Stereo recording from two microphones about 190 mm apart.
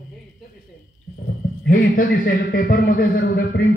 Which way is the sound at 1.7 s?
50° left (ahead or behind).